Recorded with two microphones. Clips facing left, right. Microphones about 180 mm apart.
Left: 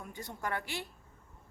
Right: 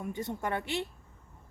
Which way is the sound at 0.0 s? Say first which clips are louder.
Right 6 dB; 25° right (ahead or behind).